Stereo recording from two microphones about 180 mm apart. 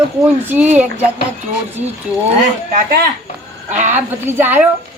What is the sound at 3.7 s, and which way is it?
Speech, 40° right (ahead or behind).